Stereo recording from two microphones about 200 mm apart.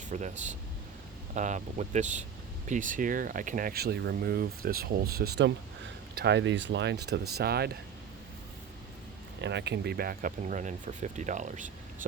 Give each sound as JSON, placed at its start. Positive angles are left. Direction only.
{"t": 0.1, "sound": "speech", "side_deg": -35}
{"t": 9.4, "sound": "speech", "side_deg": -60}